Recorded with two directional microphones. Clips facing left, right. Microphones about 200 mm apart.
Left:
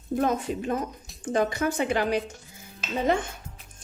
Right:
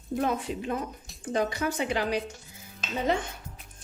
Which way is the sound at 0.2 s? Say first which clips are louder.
Left 3 dB; 45° left (ahead or behind).